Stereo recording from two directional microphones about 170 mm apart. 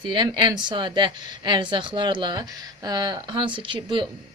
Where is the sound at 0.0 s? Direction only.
25° right (ahead or behind).